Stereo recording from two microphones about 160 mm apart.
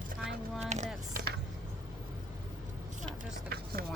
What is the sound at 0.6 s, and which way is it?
Speech, 45° right (ahead or behind).